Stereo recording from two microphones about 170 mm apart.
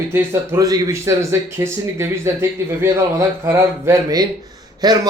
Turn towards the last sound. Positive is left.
turn(degrees=-20)  # may be behind; listen again after turning